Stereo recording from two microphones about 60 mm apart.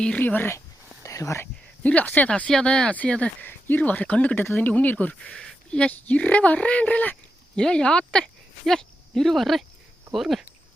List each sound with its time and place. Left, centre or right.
0.2 s speech: left
1.0 s a sound: left
1.8 s speech: left
2.6 s speech: centre
3.4 s speech: left; by 5.9 s centre
5.9 s speech: left; by 10.4 s centre